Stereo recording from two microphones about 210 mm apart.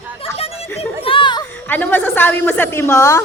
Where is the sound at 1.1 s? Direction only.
25° left (ahead or behind).